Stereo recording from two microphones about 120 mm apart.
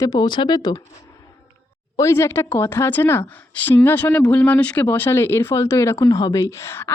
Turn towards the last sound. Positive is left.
turn(degrees=20)  # may be behind; listen again after turning